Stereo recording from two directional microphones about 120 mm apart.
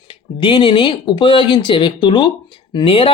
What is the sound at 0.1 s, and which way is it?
Speech, 40° left (ahead or behind).